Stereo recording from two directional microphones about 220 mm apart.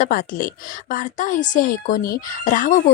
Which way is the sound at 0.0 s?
40° left (ahead or behind).